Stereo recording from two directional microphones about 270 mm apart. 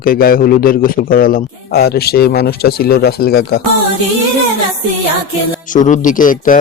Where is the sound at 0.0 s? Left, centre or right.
Left.